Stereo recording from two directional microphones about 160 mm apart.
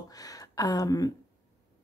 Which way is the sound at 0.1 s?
20° left (ahead or behind).